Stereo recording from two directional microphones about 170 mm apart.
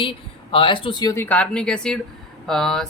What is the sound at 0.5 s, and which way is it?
Speech, 30° left (ahead or behind).